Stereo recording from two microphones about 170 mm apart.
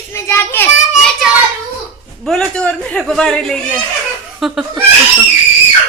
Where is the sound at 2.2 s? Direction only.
5° left (ahead or behind).